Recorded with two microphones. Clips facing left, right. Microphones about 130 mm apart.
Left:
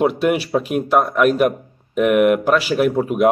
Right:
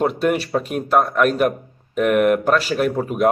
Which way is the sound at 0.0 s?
5° left (ahead or behind).